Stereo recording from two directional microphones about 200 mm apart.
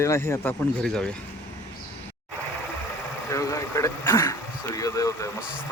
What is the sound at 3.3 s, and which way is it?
Throat clearing, 15° left (ahead or behind).